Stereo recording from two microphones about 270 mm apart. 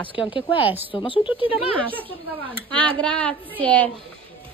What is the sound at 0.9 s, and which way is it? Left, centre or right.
Speech, centre.